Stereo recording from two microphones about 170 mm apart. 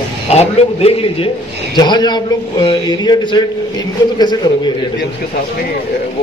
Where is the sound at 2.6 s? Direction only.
25° left (ahead or behind).